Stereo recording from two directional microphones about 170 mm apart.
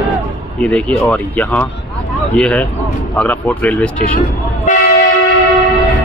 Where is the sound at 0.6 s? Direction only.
5° left (ahead or behind).